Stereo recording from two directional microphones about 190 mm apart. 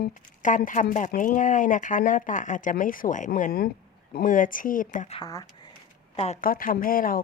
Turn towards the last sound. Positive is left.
turn(degrees=50)  # may be behind; listen again after turning